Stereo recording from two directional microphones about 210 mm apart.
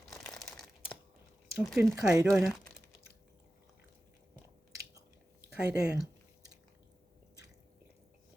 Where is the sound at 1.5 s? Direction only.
10° right (ahead or behind).